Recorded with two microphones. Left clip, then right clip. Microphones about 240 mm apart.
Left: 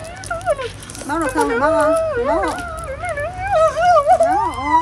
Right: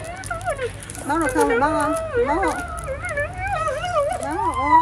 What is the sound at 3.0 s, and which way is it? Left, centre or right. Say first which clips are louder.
Dog: left 4 dB; centre.